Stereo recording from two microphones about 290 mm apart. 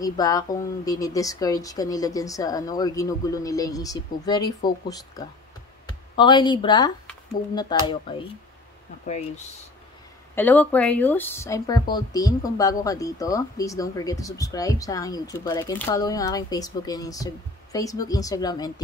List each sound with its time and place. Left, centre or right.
0.0 s speech: centre
10.3 s speech: centre